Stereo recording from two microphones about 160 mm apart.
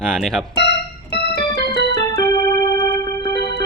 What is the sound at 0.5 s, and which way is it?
Keyboard, 90° left.